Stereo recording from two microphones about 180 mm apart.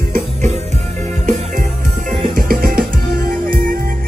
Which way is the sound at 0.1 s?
40° right (ahead or behind).